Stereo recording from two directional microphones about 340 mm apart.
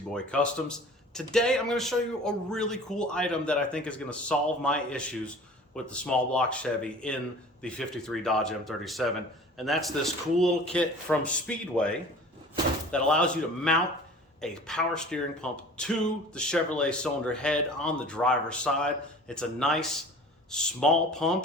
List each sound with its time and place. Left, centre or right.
0.1 s a man's voice: centre